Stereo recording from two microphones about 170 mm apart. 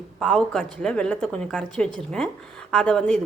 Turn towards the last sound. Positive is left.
turn(degrees=5)  # may be behind; listen again after turning